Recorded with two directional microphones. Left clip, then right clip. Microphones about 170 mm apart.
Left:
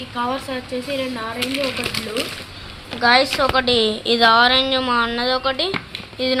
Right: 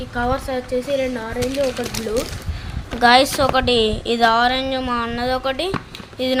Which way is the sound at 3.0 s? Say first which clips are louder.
Right 2 dB; 30° right (ahead or behind).